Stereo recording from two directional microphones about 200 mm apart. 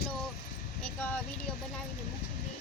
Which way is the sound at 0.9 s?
10° left (ahead or behind).